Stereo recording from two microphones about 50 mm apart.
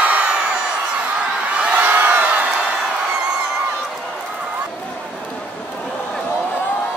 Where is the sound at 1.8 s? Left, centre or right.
Right.